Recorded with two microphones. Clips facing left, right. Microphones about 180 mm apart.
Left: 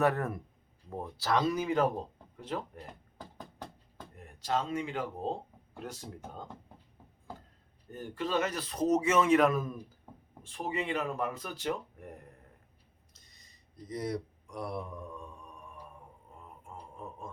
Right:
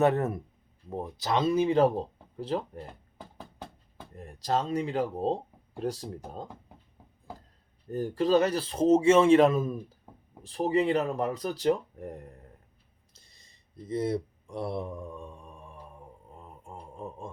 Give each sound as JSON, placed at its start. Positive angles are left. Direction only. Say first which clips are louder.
{"t": 0.0, "sound": "speech", "louder": "right 4 dB", "side_deg": -25}
{"t": 4.1, "sound": "speech", "louder": "right 4 dB", "side_deg": -35}
{"t": 7.9, "sound": "speech", "louder": "right 10 dB", "side_deg": -35}
{"t": 10.4, "sound": "speech", "louder": "right 10 dB", "side_deg": -35}
{"t": 13.1, "sound": "mantra", "louder": "right 3 dB", "side_deg": -30}
{"t": 16.4, "sound": "a sound", "louder": "right 2 dB", "side_deg": -30}